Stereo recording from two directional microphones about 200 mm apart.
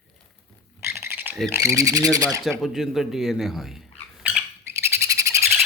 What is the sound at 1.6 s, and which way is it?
Speech, 15° right (ahead or behind).